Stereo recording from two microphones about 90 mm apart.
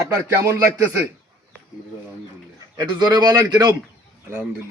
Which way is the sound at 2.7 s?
55° right (ahead or behind).